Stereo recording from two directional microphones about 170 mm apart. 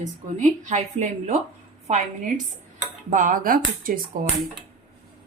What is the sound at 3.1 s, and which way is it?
Speech, 50° right (ahead or behind).